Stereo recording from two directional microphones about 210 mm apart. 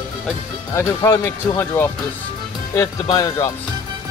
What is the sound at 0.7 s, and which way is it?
Speech, 15° left (ahead or behind).